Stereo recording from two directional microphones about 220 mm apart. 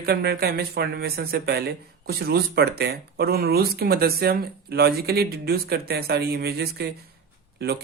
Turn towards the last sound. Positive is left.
turn(degrees=-45)  # may be behind; listen again after turning